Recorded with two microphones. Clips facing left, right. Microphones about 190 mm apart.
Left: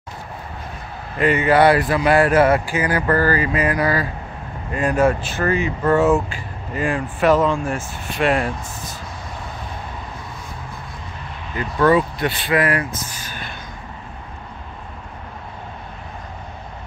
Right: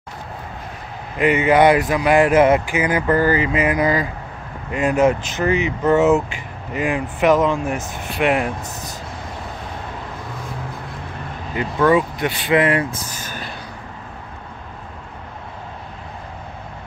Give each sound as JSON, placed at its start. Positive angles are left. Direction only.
{"t": 1.1, "sound": "speech", "side_deg": -15}
{"t": 11.8, "sound": "speech", "side_deg": -10}
{"t": 13.1, "sound": "a sound", "side_deg": -45}